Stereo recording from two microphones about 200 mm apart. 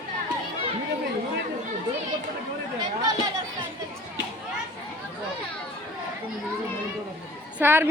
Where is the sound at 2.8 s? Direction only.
20° right (ahead or behind).